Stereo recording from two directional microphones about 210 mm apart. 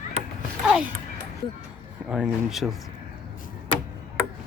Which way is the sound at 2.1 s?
5° right (ahead or behind).